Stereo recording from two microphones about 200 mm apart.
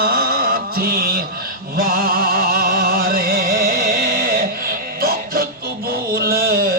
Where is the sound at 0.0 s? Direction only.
50° right (ahead or behind).